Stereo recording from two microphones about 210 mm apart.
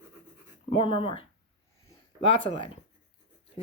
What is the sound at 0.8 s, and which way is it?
A woman's voice, 25° left (ahead or behind).